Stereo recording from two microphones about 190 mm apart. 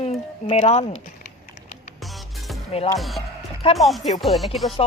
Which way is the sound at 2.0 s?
Centre (ahead or behind).